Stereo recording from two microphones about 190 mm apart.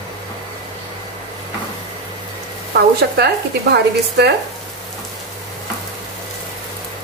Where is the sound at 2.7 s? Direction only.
60° right (ahead or behind).